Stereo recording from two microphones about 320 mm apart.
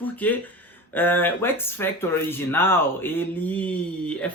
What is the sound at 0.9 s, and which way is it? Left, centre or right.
Speech, centre.